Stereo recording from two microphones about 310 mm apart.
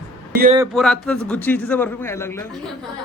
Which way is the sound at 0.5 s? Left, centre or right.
Centre.